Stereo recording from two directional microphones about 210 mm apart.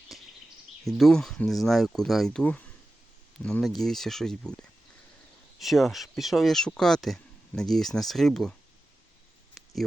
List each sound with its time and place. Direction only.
0.1 s a sound: centre (ahead or behind)
0.9 s speech: centre (ahead or behind)
5.5 s speech: centre (ahead or behind)